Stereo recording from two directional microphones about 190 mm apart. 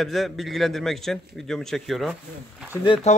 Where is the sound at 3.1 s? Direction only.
35° left (ahead or behind).